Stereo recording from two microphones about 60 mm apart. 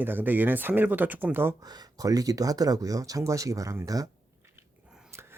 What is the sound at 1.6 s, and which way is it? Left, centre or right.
Speech, right.